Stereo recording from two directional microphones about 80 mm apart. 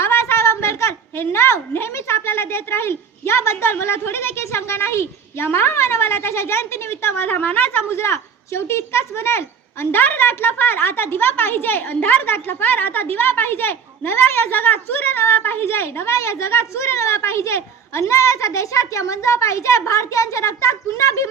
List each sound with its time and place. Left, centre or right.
0.0 s a woman's voice: left